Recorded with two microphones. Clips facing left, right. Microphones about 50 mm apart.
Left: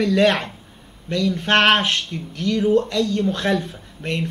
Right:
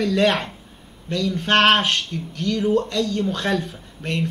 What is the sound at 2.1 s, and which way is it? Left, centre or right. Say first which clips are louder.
A man's voice: left 1 dB; left.